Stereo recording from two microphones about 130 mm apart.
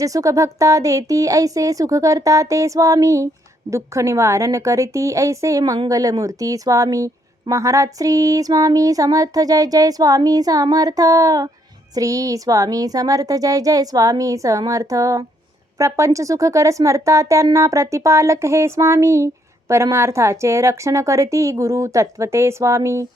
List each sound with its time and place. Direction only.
0.0 s speech: 25° right (ahead or behind)